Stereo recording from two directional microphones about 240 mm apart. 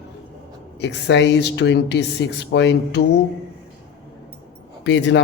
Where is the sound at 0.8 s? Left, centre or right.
Left.